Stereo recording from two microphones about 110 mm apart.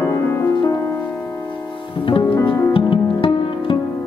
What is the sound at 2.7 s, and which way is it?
Music, 50° left (ahead or behind).